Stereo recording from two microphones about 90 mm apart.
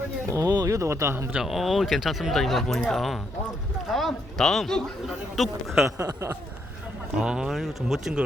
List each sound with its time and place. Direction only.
0.3 s speech: 40° right (ahead or behind)
1.3 s speech: 5° right (ahead or behind)
6.0 s speech: 35° right (ahead or behind)
7.2 s speech: 5° right (ahead or behind)